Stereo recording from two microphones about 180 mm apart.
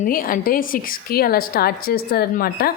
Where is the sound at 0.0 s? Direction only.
50° left (ahead or behind).